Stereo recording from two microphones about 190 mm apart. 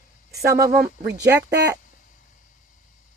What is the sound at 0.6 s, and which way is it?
Speech, 60° right (ahead or behind).